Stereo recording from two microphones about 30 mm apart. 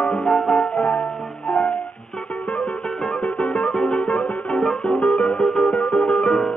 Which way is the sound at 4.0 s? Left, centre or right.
Left.